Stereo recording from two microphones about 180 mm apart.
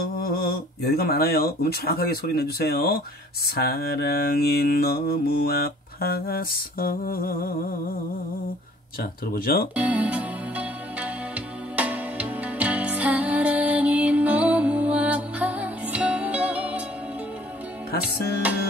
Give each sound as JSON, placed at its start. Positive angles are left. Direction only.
{"t": 0.2, "sound": "mantra", "side_deg": 55}
{"t": 9.3, "sound": "mantra", "side_deg": 55}
{"t": 9.8, "sound": "music", "side_deg": -10}
{"t": 18.0, "sound": "music", "side_deg": -10}